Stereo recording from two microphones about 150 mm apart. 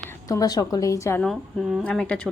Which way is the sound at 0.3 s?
25° left (ahead or behind).